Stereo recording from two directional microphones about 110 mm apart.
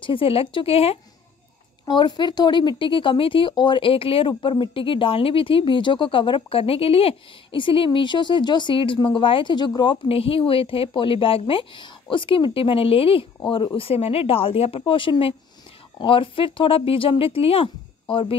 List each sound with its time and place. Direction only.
0.0 s speech: 55° left (ahead or behind)
1.9 s speech: 40° left (ahead or behind)
10.0 s speech: 60° left (ahead or behind)
13.7 s speech: 60° left (ahead or behind)